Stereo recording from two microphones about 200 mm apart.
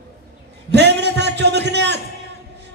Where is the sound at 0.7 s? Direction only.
60° right (ahead or behind).